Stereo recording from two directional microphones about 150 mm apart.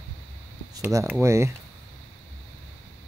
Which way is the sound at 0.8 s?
20° right (ahead or behind).